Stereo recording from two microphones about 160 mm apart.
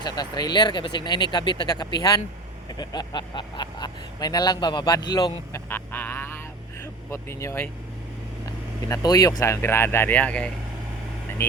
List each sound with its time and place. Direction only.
0.0 s speech: 25° left (ahead or behind)
5.5 s speech: 15° left (ahead or behind)